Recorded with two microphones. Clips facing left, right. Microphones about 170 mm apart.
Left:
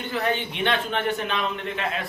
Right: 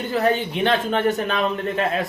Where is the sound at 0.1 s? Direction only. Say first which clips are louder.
Right 6 dB; 40° right (ahead or behind).